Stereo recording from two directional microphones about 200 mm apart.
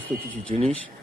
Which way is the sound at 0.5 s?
35° right (ahead or behind).